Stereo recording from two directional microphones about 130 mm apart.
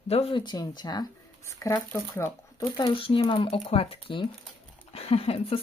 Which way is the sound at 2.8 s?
40° left (ahead or behind).